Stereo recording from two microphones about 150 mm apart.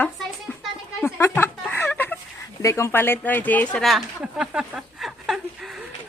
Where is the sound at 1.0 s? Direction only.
15° left (ahead or behind).